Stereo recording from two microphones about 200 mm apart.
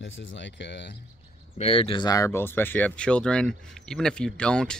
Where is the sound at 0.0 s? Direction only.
70° left (ahead or behind).